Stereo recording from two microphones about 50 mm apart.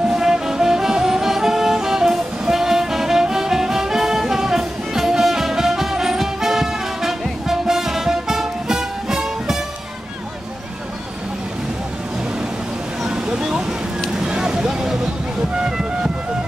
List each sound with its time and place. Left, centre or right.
0.1 s music: centre
13.1 s a sound: centre
14.1 s vehicle: centre
15.6 s music: centre